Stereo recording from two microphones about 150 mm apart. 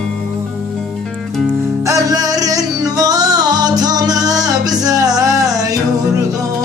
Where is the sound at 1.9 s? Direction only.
20° right (ahead or behind).